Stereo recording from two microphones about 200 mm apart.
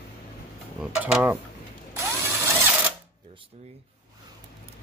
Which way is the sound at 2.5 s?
10° right (ahead or behind).